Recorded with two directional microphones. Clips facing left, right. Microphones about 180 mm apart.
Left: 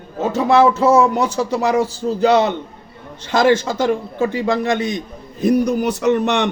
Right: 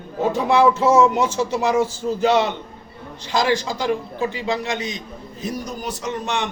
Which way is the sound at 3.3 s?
55° left (ahead or behind).